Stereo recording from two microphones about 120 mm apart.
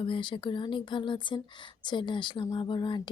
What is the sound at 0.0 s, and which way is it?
Speech, 45° left (ahead or behind).